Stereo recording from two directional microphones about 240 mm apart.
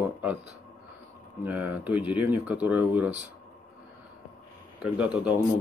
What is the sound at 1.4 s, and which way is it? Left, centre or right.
Speech, centre.